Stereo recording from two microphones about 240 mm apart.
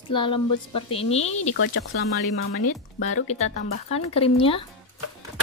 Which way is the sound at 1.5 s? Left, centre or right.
Left.